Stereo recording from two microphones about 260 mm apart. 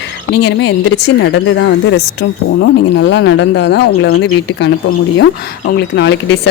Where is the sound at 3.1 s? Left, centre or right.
Left.